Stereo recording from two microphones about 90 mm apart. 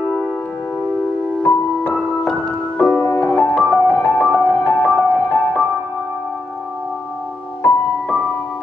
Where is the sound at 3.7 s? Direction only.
20° left (ahead or behind).